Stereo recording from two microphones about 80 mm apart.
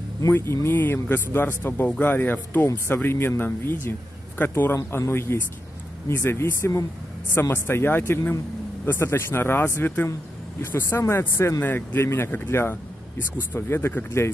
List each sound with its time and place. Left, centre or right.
0.3 s speech: left